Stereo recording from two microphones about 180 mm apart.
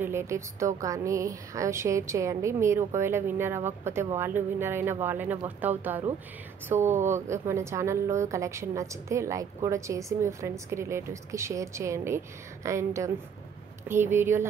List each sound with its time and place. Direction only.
0.0 s a woman's voice: 15° right (ahead or behind)